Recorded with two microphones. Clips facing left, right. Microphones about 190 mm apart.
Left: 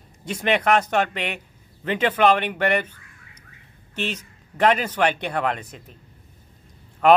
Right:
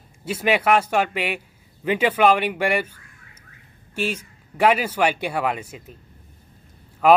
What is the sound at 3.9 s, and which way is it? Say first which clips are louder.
A man's voice: right 3 dB; 10° right (ahead or behind).